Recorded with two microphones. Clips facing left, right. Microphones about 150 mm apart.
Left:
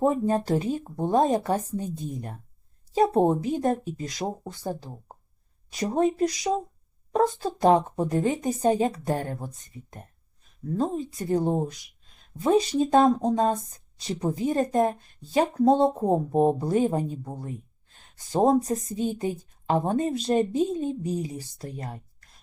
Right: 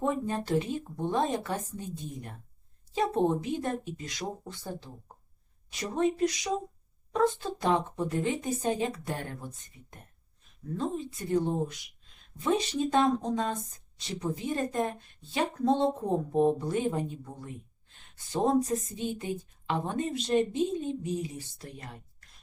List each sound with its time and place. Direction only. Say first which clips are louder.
0.0 s a woman's voice: left 7 dB; 40° left (ahead or behind)
10.8 s a woman's voice: left 5 dB; 40° left (ahead or behind)
18.3 s a woman's voice: left 5 dB; 40° left (ahead or behind)